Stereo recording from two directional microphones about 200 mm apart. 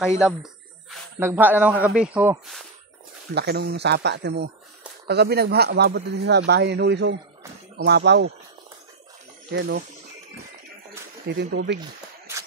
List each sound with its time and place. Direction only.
0.2 s a sound: centre (ahead or behind)
1.2 s a man's voice: 10° right (ahead or behind)
3.3 s speech: 55° right (ahead or behind)
9.5 s speech: 60° right (ahead or behind)
11.2 s speech: 60° right (ahead or behind)